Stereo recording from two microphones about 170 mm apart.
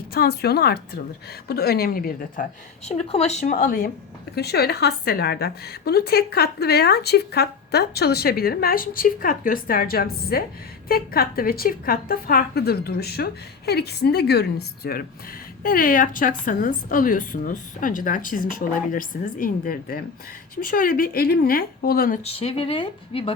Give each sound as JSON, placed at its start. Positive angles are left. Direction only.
{"t": 0.1, "sound": "a woman's voice", "side_deg": 65}
{"t": 2.8, "sound": "a woman's voice", "side_deg": 40}
{"t": 4.4, "sound": "a woman's voice", "side_deg": 70}
{"t": 15.6, "sound": "a woman's voice", "side_deg": 55}
{"t": 22.2, "sound": "speech", "side_deg": 35}